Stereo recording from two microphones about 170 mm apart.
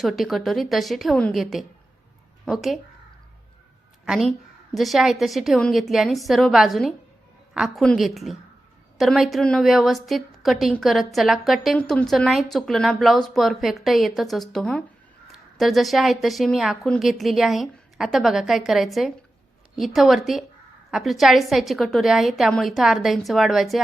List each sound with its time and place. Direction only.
0.0 s a woman's voice: centre (ahead or behind)
4.0 s a woman's voice: centre (ahead or behind)